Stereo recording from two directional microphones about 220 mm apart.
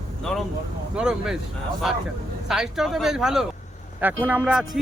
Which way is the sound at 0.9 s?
5° right (ahead or behind).